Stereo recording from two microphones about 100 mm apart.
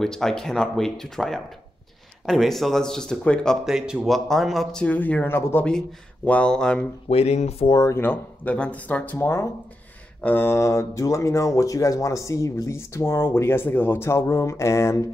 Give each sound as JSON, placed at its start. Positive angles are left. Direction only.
{"t": 0.0, "sound": "speech", "side_deg": 5}
{"t": 3.6, "sound": "speech", "side_deg": -5}
{"t": 4.8, "sound": "speech", "side_deg": 15}
{"t": 7.1, "sound": "speech", "side_deg": 90}
{"t": 7.6, "sound": "speech", "side_deg": 40}
{"t": 7.9, "sound": "speech", "side_deg": 20}